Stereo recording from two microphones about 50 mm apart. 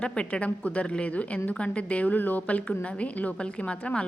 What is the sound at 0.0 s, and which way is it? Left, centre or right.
A woman's voice, left.